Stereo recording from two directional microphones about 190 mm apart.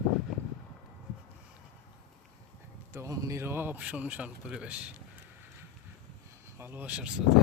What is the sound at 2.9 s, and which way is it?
Speech, 15° right (ahead or behind).